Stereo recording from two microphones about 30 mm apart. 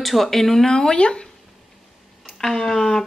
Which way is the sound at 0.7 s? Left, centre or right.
Left.